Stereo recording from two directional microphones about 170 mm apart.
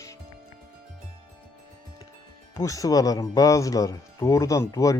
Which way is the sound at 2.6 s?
20° left (ahead or behind).